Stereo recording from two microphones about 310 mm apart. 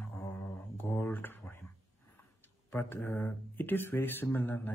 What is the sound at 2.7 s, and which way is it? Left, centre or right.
Speech, centre.